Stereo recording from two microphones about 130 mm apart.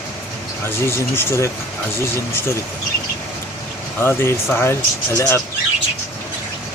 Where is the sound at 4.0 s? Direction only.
20° left (ahead or behind).